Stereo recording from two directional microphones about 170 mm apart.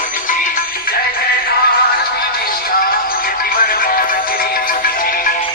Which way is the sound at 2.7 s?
60° left (ahead or behind).